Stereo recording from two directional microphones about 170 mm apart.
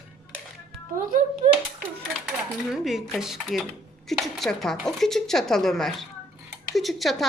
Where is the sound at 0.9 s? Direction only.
50° right (ahead or behind).